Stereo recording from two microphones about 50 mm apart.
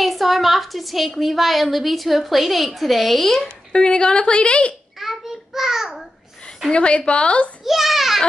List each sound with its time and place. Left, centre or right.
0.0 s a woman's voice: centre
3.7 s a woman's voice: centre
4.9 s a sound: centre
6.7 s a woman's voice: centre
7.6 s a woman's voice: centre